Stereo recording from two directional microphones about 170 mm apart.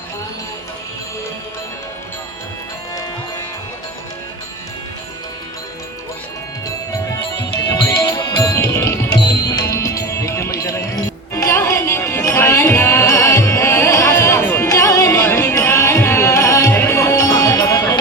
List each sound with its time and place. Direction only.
7.9 s music: 20° left (ahead or behind)